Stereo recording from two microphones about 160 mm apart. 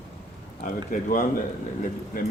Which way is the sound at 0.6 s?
60° left (ahead or behind).